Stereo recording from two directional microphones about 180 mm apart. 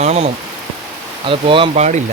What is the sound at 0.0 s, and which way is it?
Speech, 35° right (ahead or behind).